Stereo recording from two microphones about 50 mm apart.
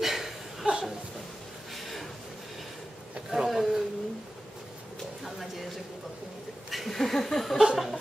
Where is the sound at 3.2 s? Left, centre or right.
Centre.